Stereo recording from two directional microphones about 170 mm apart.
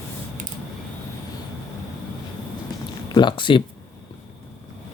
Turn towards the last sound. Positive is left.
turn(degrees=30)  # may be behind; listen again after turning